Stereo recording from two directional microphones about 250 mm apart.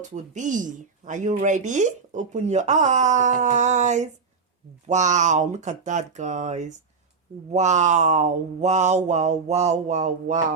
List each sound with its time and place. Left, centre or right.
0.0 s speech: right